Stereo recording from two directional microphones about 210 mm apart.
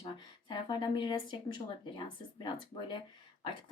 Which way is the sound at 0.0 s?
25° left (ahead or behind).